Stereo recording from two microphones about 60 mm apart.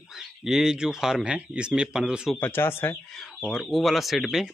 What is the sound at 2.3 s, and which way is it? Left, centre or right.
Speech, left.